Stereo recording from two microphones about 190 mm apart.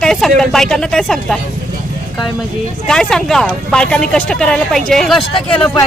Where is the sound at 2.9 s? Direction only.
5° left (ahead or behind).